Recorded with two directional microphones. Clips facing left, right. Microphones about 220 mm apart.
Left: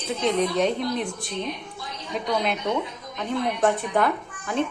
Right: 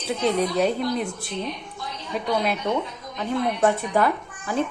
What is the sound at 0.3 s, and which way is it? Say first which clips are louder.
A woman's voice: even; 10° right (ahead or behind).